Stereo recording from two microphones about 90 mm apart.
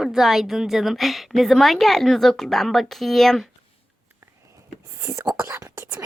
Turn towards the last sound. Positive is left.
turn(degrees=-30)  # may be behind; listen again after turning